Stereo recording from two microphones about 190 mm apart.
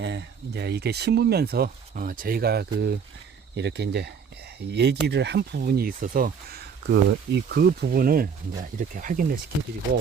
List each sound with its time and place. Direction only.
0.0 s speech: 65° right (ahead or behind); by 9.4 s 45° right (ahead or behind)